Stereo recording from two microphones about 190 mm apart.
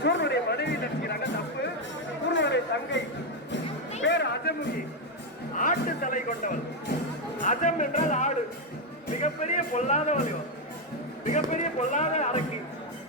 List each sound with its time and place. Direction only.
0.0 s chatter: 65° left (ahead or behind)
2.3 s music: 70° left (ahead or behind)
4.0 s music: 65° left (ahead or behind)
5.5 s music: 45° left (ahead or behind)
11.3 s music: 40° left (ahead or behind)